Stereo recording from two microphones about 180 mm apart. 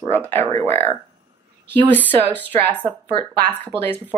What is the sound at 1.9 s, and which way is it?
Speech, 10° left (ahead or behind).